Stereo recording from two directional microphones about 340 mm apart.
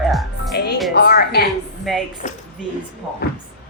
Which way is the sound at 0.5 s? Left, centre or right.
Left.